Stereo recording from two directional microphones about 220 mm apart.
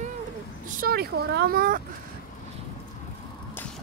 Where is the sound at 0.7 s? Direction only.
40° right (ahead or behind).